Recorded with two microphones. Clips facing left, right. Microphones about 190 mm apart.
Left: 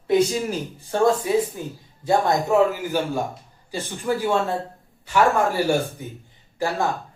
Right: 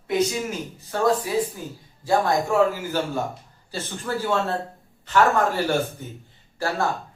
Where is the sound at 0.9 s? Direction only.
25° left (ahead or behind).